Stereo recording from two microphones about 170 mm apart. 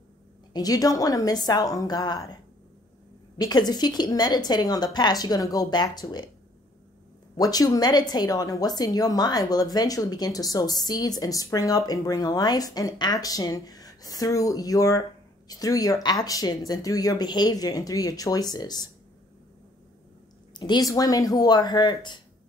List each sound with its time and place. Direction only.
0.5 s speech: 20° left (ahead or behind)
3.3 s speech: 25° left (ahead or behind)
7.3 s speech: 20° left (ahead or behind)
20.5 s speech: 25° left (ahead or behind)